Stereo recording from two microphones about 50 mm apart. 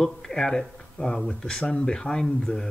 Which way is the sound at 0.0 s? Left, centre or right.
Centre.